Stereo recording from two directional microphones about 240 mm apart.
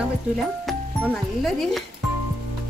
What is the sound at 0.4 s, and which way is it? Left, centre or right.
Speech, centre.